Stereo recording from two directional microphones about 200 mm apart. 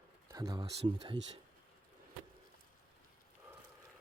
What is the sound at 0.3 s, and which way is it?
Speech, 20° right (ahead or behind).